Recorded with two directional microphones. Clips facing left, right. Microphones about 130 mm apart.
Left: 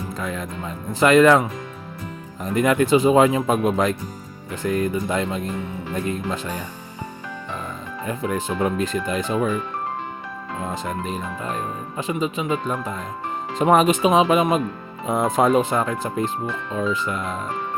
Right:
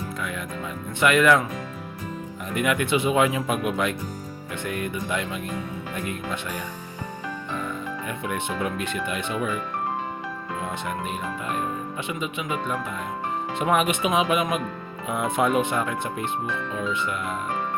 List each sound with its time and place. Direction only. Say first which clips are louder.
0.2 s speech: left 3 dB; 35° left (ahead or behind)
2.4 s speech: left 6 dB; 35° left (ahead or behind)
8.0 s speech: left 7 dB; 35° left (ahead or behind)
10.6 s speech: left 3 dB; 35° left (ahead or behind)